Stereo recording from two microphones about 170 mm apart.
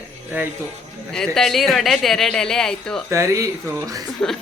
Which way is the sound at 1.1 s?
5° left (ahead or behind).